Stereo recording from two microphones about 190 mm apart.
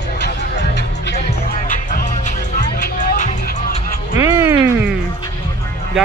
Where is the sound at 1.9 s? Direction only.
40° left (ahead or behind).